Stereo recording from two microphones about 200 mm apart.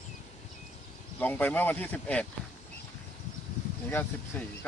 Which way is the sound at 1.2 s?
10° left (ahead or behind).